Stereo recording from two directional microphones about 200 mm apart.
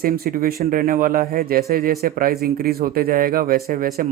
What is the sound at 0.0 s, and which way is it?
Speech, 45° right (ahead or behind).